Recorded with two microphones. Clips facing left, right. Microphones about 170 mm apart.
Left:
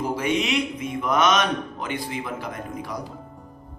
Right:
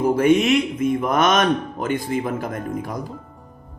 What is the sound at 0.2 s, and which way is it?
A man's voice, 50° right (ahead or behind).